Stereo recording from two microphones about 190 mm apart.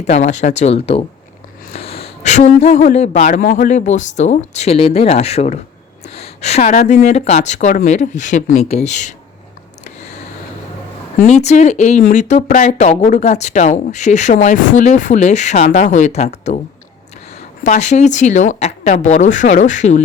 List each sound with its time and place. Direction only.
0.0 s speech: 35° left (ahead or behind)
9.8 s a sound: 35° left (ahead or behind)
11.2 s speech: 35° left (ahead or behind)
17.6 s speech: 40° left (ahead or behind)